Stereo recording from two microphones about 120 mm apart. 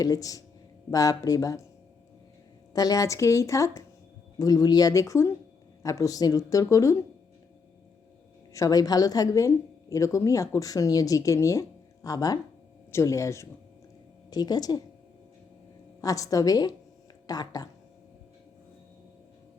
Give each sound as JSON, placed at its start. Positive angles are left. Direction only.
{"t": 0.0, "sound": "speech", "side_deg": 30}
{"t": 2.7, "sound": "speech", "side_deg": 30}
{"t": 8.5, "sound": "speech", "side_deg": 30}
{"t": 16.0, "sound": "speech", "side_deg": 30}